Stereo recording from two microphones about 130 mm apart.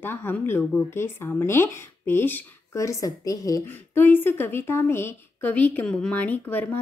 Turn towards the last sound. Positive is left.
turn(degrees=15)  # may be behind; listen again after turning